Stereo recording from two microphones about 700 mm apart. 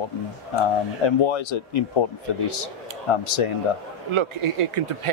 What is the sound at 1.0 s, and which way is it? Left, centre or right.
Speech, left.